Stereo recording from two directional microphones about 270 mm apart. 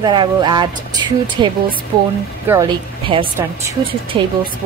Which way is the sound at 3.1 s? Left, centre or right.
Centre.